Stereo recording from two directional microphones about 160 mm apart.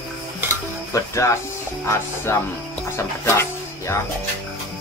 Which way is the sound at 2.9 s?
15° left (ahead or behind).